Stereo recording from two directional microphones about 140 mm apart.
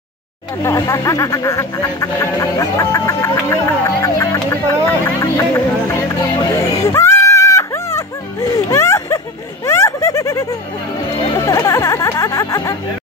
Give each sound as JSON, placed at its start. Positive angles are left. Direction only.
{"t": 0.6, "sound": "speech", "side_deg": 20}
{"t": 5.9, "sound": "music", "side_deg": 20}
{"t": 9.7, "sound": "a sound", "side_deg": 20}
{"t": 11.3, "sound": "music", "side_deg": 25}